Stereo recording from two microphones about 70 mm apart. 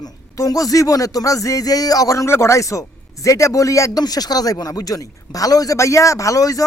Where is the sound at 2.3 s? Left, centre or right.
Left.